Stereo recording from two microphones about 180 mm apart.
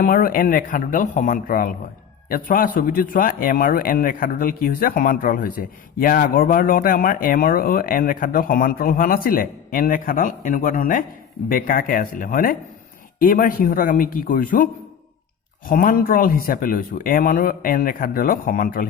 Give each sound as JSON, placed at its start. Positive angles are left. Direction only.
{"t": 0.0, "sound": "a man's voice", "side_deg": 50}